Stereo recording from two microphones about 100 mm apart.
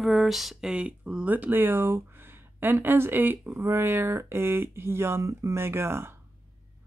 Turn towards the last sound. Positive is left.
turn(degrees=-25)  # may be behind; listen again after turning